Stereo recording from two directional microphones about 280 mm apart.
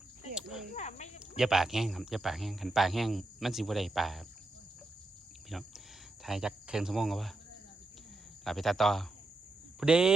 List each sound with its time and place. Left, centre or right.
0.3 s a sound: centre
0.7 s snake: left
1.4 s speech: centre
5.5 s cricket: centre
6.2 s speech: centre
8.4 s speech: centre